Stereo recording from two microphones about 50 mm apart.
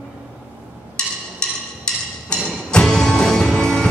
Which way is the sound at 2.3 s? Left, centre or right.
Centre.